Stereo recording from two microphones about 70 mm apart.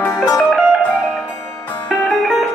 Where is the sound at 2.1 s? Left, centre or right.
Centre.